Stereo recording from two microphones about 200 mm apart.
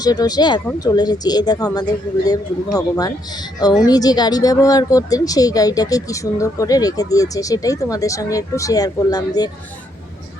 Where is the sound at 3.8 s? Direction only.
20° left (ahead or behind).